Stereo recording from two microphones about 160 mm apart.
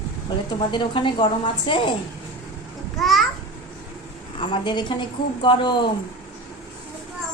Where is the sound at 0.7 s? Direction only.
30° left (ahead or behind).